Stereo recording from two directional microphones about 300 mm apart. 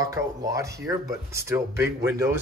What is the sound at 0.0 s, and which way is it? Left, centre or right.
Speech, centre.